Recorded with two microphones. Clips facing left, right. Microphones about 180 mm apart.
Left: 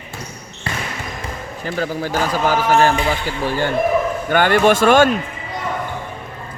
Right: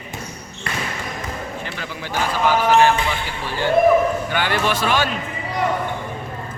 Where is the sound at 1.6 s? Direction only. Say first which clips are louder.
Left 8 dB; 40° left (ahead or behind).